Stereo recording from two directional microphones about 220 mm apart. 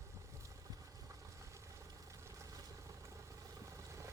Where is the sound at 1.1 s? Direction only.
15° right (ahead or behind).